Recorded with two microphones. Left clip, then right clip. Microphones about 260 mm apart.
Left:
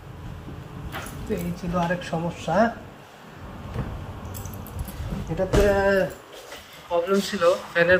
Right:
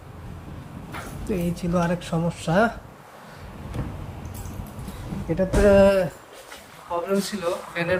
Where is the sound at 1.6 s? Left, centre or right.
Right.